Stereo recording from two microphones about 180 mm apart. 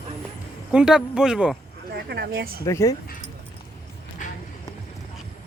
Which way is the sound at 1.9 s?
70° right (ahead or behind).